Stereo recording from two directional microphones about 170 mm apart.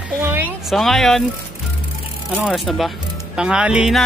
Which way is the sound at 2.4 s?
Centre (ahead or behind).